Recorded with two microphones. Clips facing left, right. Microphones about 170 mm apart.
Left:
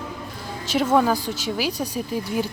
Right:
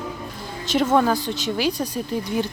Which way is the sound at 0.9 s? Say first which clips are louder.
Left 1 dB; 5° left (ahead or behind).